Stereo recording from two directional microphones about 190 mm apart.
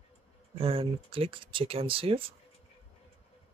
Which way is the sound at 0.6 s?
30° right (ahead or behind).